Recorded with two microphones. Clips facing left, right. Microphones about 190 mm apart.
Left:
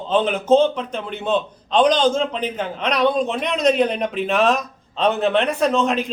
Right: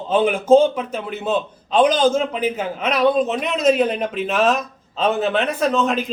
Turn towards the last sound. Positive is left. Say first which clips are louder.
# even
turn(degrees=0)  # may be behind; listen again after turning